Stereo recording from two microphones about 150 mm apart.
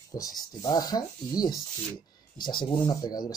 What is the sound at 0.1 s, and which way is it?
Speech, 25° left (ahead or behind).